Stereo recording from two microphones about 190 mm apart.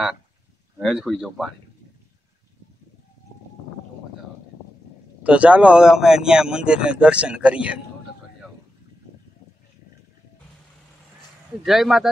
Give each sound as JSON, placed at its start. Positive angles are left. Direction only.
{"t": 0.7, "sound": "a man's voice", "side_deg": 0}
{"t": 5.2, "sound": "a man's voice", "side_deg": -5}
{"t": 11.6, "sound": "a man's voice", "side_deg": 0}